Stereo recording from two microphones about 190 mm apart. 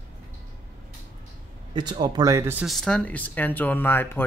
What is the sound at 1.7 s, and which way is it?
Speech, 25° right (ahead or behind).